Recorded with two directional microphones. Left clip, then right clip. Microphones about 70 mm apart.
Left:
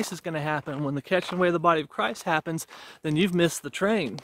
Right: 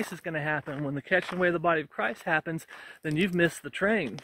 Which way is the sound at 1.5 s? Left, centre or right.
Left.